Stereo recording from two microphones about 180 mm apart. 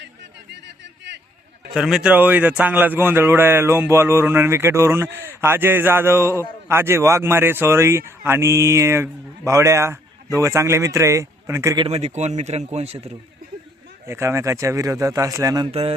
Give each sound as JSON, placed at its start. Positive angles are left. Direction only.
{"t": 1.7, "sound": "speech", "side_deg": -5}
{"t": 11.9, "sound": "speech", "side_deg": -35}
{"t": 14.1, "sound": "speech", "side_deg": -15}
{"t": 15.7, "sound": "speech", "side_deg": -35}